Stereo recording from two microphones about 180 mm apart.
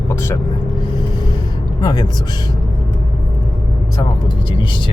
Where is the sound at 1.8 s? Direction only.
20° left (ahead or behind).